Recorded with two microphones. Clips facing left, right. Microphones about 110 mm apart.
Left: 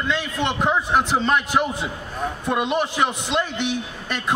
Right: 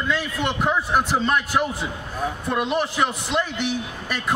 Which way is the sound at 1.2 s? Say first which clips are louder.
Left 1 dB; 15° left (ahead or behind).